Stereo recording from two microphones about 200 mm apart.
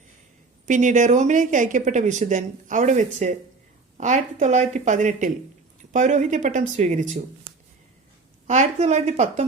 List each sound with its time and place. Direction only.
0.6 s speech: 40° right (ahead or behind)
8.4 s speech: 35° right (ahead or behind)